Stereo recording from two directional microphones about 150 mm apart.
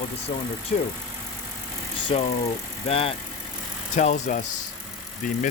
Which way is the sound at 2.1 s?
35° left (ahead or behind).